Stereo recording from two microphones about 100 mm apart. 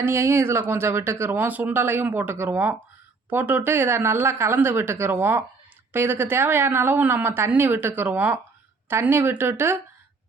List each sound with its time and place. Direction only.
0.0 s speech: 25° right (ahead or behind)